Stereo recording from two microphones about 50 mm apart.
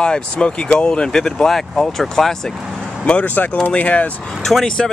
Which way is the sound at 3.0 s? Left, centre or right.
Left.